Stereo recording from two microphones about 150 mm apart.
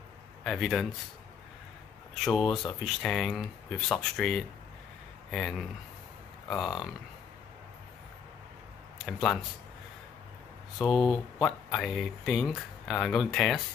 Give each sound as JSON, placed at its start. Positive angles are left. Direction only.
{"t": 0.4, "sound": "speech", "side_deg": 0}
{"t": 2.2, "sound": "speech", "side_deg": 0}
{"t": 9.0, "sound": "speech", "side_deg": 5}
{"t": 10.8, "sound": "speech", "side_deg": 0}